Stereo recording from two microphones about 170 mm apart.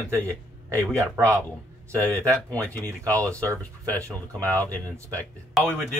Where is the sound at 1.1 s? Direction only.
15° right (ahead or behind).